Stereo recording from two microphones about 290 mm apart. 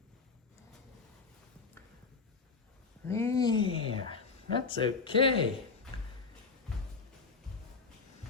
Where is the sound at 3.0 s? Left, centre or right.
Centre.